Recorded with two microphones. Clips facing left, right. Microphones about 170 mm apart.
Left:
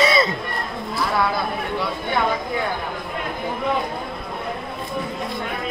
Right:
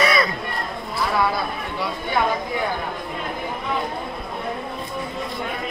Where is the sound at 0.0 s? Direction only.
25° left (ahead or behind).